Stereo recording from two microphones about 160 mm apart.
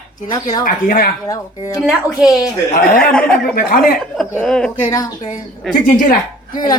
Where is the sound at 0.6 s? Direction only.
60° left (ahead or behind).